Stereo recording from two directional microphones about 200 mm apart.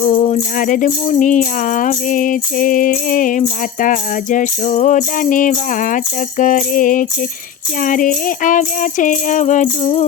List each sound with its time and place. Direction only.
0.0 s music: 35° left (ahead or behind)